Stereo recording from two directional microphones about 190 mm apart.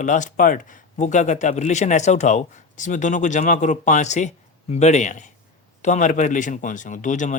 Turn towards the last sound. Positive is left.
turn(degrees=40)  # may be behind; listen again after turning